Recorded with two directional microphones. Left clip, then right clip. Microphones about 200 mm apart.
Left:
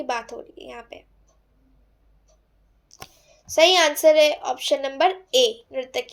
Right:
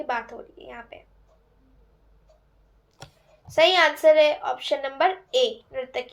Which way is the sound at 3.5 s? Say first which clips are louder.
Left 2 dB; 50° left (ahead or behind).